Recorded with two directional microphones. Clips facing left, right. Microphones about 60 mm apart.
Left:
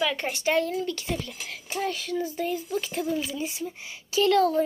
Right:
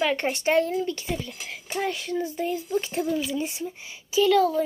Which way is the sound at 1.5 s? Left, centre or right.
Right.